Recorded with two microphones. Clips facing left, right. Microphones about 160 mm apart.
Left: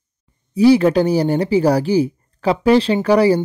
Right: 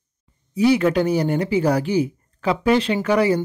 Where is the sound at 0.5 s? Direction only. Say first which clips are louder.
Left 5 dB; 30° left (ahead or behind).